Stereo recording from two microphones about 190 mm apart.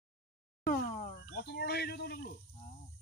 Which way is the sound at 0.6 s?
50° left (ahead or behind).